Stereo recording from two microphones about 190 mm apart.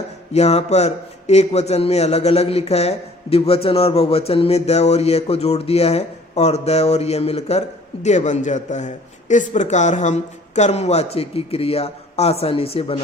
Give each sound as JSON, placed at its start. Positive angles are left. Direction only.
{"t": 0.3, "sound": "a man's voice", "side_deg": 35}